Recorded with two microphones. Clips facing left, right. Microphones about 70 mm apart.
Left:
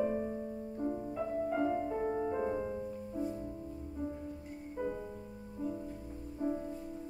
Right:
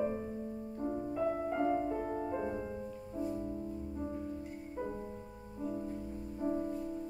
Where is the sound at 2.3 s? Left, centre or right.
Centre.